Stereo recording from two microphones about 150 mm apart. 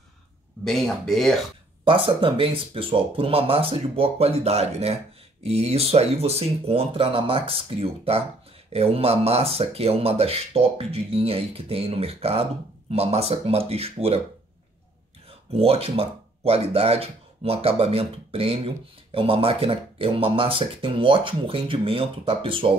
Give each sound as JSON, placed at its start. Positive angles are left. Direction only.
{"t": 0.7, "sound": "speech", "side_deg": 0}
{"t": 1.9, "sound": "speech", "side_deg": -35}
{"t": 15.5, "sound": "speech", "side_deg": -40}